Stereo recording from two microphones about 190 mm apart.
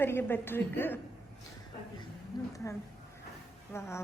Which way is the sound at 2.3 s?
20° left (ahead or behind).